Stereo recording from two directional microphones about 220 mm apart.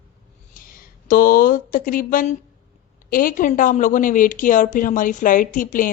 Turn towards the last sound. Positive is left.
turn(degrees=35)  # may be behind; listen again after turning